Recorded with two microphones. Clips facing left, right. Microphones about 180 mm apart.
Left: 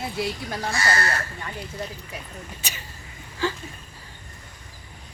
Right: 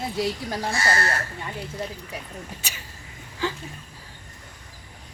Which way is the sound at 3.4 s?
15° right (ahead or behind).